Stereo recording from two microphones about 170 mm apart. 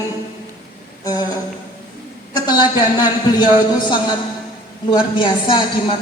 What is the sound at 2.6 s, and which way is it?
Speech, 25° left (ahead or behind).